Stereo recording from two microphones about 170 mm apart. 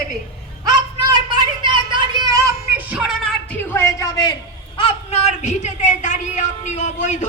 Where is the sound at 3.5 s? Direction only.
15° left (ahead or behind).